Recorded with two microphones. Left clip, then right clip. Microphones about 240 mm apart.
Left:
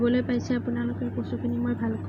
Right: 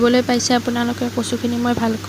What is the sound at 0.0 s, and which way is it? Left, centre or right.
Speech, right.